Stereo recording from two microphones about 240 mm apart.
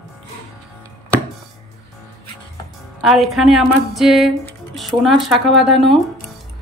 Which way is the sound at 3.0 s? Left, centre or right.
Centre.